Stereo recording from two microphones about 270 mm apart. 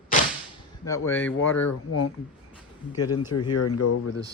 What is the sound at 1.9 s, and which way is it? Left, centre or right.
Speech, left.